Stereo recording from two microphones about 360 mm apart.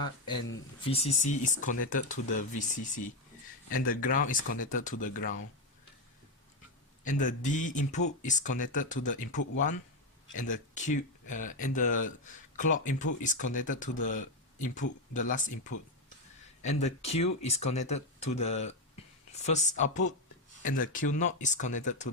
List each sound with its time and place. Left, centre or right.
0.9 s speech: centre
7.0 s speech: left
16.6 s speech: centre